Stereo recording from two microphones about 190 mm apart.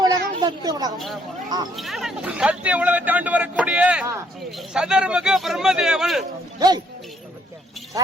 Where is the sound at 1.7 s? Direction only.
Centre (ahead or behind).